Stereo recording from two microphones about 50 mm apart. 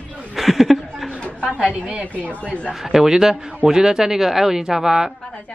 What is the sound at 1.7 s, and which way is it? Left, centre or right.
Speech, right.